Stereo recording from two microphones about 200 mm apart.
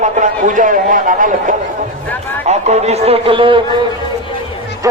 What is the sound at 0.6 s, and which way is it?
A man's voice, 40° right (ahead or behind).